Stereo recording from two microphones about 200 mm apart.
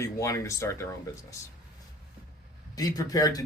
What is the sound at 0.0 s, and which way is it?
A man's voice, 15° left (ahead or behind).